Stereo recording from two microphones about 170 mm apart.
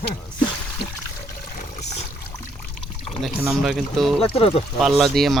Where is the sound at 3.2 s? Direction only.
Centre (ahead or behind).